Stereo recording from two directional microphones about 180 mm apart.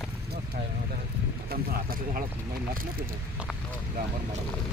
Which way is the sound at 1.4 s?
55° right (ahead or behind).